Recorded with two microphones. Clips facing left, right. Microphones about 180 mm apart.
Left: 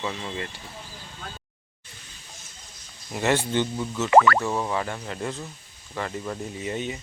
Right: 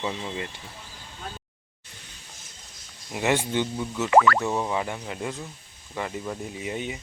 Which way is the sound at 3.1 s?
10° right (ahead or behind).